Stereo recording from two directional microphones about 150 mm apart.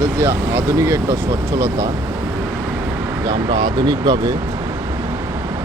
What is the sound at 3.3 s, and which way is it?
Speech, 30° right (ahead or behind).